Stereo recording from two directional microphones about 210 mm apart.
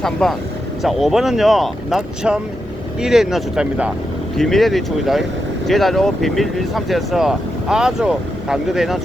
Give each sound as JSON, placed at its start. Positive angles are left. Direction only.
{"t": 0.0, "sound": "speech", "side_deg": 0}